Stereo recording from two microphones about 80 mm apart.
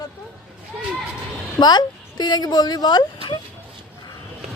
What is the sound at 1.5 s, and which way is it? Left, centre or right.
Speech, left.